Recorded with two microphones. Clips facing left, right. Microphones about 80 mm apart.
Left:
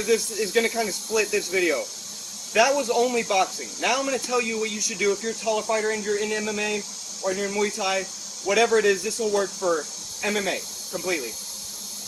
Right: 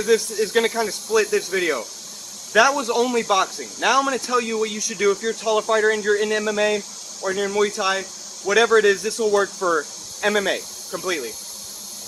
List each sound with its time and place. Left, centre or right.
0.1 s speech: right
5.5 s speech: right